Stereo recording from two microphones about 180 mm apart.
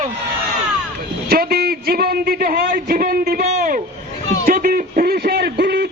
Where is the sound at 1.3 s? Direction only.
60° right (ahead or behind).